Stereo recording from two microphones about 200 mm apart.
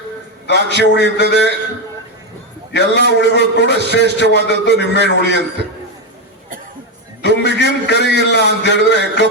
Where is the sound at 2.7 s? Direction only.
60° left (ahead or behind).